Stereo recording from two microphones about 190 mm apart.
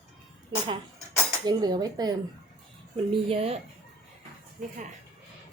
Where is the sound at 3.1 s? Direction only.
30° right (ahead or behind).